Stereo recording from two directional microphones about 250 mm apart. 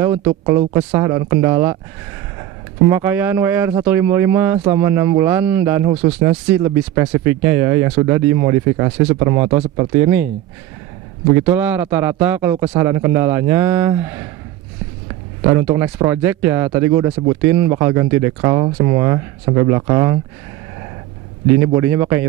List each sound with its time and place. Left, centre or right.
0.0 s speech: centre
2.9 s speech: centre
5.9 s speech: right
6.2 s speech: centre
11.5 s speech: centre
15.5 s speech: centre
21.7 s speech: centre